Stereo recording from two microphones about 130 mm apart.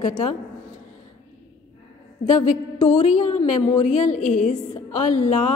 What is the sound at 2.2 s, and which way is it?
A woman's voice, 60° left (ahead or behind).